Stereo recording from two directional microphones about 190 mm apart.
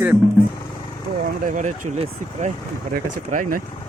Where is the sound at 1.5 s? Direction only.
40° right (ahead or behind).